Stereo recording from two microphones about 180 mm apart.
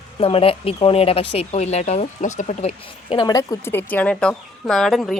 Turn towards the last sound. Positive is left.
turn(degrees=0)  # may be behind; listen again after turning